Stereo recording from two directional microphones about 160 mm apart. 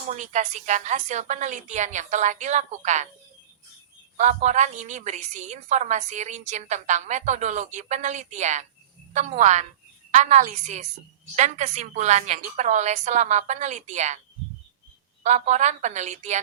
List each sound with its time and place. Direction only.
0.1 s a woman's voice: 45° right (ahead or behind)
4.2 s a woman's voice: 45° right (ahead or behind)
15.2 s a woman's voice: 45° right (ahead or behind)